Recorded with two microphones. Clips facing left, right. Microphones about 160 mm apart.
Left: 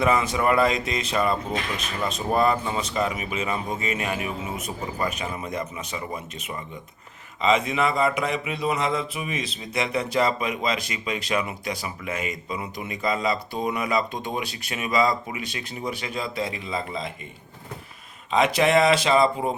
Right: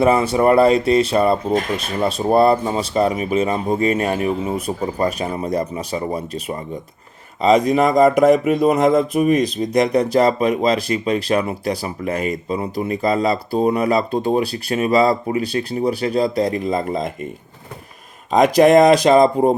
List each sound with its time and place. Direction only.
0.0 s speech: 35° right (ahead or behind)
18.3 s speech: 40° right (ahead or behind)